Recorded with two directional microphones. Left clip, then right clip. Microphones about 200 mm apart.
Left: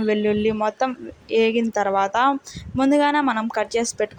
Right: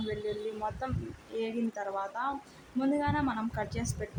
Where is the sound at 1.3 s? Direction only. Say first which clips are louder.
Left 16 dB; 40° left (ahead or behind).